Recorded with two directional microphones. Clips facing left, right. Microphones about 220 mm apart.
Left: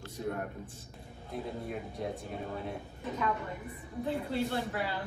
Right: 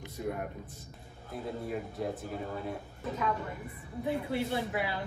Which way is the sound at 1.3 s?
Centre (ahead or behind).